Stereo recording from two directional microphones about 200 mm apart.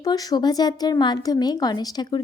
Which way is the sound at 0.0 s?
20° left (ahead or behind).